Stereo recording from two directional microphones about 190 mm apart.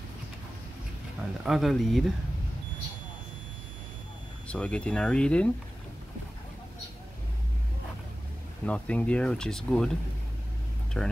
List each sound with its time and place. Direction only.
1.4 s speech: centre (ahead or behind)
4.5 s speech: 5° left (ahead or behind)
8.6 s speech: 5° left (ahead or behind)
10.9 s speech: 5° left (ahead or behind)